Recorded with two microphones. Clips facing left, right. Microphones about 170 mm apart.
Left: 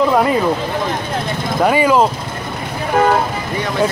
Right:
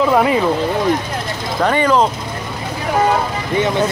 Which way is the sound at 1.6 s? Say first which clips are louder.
Left 1 dB; 10° left (ahead or behind).